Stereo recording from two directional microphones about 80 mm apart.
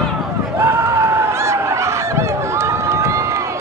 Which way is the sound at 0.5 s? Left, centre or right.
Right.